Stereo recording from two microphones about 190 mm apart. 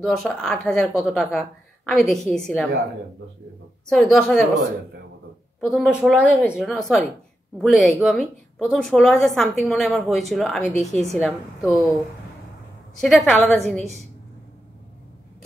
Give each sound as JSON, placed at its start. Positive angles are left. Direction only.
{"t": 0.0, "sound": "a woman's voice", "side_deg": 0}
{"t": 3.9, "sound": "a woman's voice", "side_deg": 0}
{"t": 5.6, "sound": "a woman's voice", "side_deg": 0}
{"t": 13.0, "sound": "a woman's voice", "side_deg": 0}